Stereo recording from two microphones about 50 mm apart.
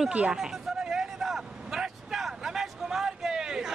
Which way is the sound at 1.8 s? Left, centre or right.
Centre.